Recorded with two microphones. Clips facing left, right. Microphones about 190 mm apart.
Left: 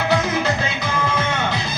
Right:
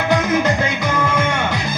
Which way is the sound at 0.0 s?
50° right (ahead or behind).